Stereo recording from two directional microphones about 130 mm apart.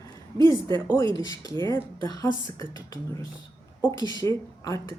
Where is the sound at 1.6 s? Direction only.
30° left (ahead or behind).